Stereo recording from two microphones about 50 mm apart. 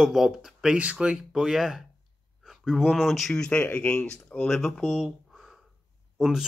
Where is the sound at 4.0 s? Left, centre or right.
Centre.